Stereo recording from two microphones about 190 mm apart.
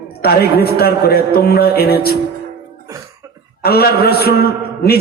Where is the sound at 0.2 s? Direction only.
55° left (ahead or behind).